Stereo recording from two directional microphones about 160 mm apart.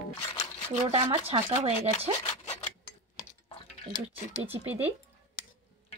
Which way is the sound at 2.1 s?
40° left (ahead or behind).